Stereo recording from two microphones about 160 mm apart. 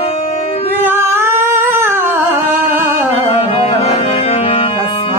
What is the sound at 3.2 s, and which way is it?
Tabla, 40° left (ahead or behind).